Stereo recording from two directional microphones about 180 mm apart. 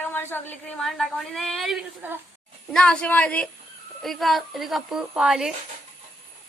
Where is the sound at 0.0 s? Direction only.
10° left (ahead or behind).